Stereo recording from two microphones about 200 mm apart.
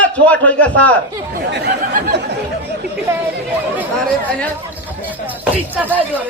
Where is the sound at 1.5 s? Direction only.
55° right (ahead or behind).